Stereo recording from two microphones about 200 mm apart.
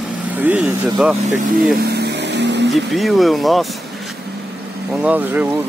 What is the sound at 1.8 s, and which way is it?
Vehicle, 55° right (ahead or behind).